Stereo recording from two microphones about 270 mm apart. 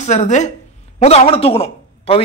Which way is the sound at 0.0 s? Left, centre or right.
Left.